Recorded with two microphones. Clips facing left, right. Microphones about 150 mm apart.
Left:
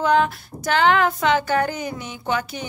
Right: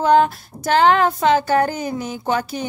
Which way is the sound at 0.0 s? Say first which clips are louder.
Right 4 dB; 35° right (ahead or behind).